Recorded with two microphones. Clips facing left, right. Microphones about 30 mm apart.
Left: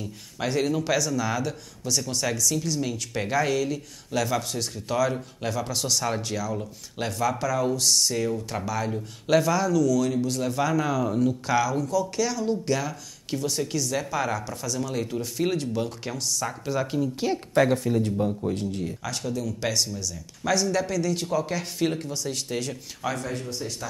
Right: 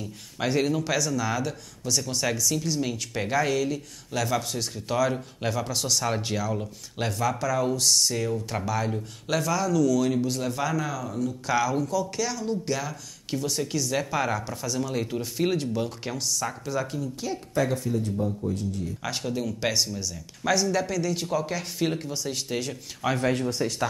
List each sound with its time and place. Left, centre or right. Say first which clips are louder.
0.0 s speech: right 1 dB; centre
9.3 s speech: left 4 dB; centre
9.8 s speech: even; centre
11.1 s speech: left 6 dB; left
11.4 s speech: left 1 dB; centre
16.6 s speech: left 3 dB; centre
17.6 s a man's voice: left 4 dB; left
19.0 s speech: right 3 dB; centre
20.5 s speech: left 1 dB; centre
23.2 s speech: right 7 dB; right